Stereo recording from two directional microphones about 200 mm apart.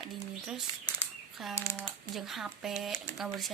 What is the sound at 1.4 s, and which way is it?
Speech, centre (ahead or behind).